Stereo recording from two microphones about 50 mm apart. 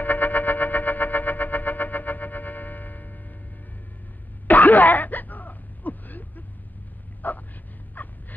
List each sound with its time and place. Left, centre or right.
0.0 s music: left
4.5 s throat clearing: left
7.2 s dog: left
8.0 s a sound: left